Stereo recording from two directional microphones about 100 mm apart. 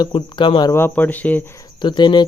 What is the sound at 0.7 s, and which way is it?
Speech, 20° left (ahead or behind).